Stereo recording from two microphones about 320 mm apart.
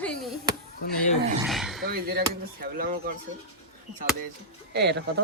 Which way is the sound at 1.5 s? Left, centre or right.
Centre.